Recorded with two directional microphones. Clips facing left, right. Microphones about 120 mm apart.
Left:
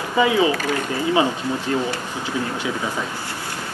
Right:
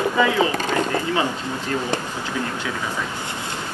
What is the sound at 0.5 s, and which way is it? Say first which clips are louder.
Speech: right 1 dB; 25° right (ahead or behind).